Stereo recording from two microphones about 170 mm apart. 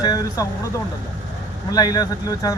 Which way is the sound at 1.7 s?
20° left (ahead or behind).